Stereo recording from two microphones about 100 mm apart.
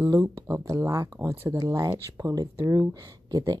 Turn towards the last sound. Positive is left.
turn(degrees=-40)  # may be behind; listen again after turning